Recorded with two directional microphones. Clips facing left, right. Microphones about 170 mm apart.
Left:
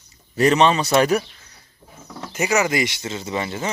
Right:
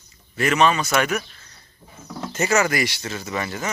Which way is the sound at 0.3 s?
30° left (ahead or behind).